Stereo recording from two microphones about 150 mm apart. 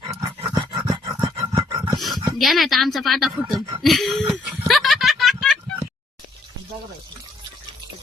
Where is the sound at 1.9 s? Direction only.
Centre (ahead or behind).